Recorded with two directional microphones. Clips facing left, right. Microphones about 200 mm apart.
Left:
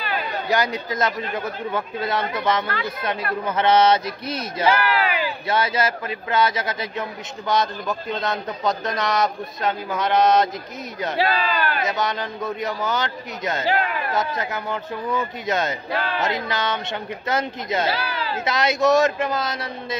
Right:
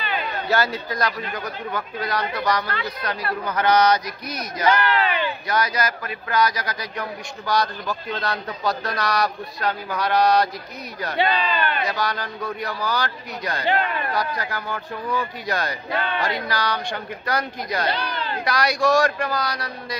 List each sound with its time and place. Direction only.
0.0 s a sound: centre (ahead or behind)
0.5 s a man's voice: 20° left (ahead or behind)
4.6 s a sound: 5° left (ahead or behind)
5.5 s a man's voice: 25° left (ahead or behind)
11.1 s speech: 5° left (ahead or behind)
12.0 s a man's voice: 20° left (ahead or behind)
13.7 s speech: centre (ahead or behind)
14.1 s a man's voice: 20° left (ahead or behind)
15.9 s speech: centre (ahead or behind)
16.4 s a man's voice: 20° left (ahead or behind)
17.8 s speech: 5° left (ahead or behind)
18.4 s a man's voice: 20° left (ahead or behind)